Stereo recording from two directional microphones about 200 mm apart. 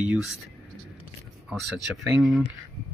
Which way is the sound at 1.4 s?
Centre (ahead or behind).